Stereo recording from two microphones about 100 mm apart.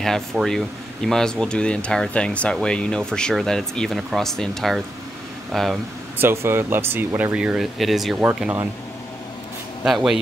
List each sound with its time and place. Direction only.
0.0 s speech: 5° left (ahead or behind)
6.1 s speech: 25° right (ahead or behind)
7.3 s speech: 5° right (ahead or behind)
9.8 s speech: 5° right (ahead or behind)